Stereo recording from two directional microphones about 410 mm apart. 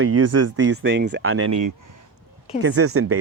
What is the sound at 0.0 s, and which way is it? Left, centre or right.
Speech, right.